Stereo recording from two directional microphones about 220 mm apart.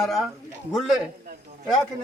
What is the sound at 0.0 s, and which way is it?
Speech, centre (ahead or behind).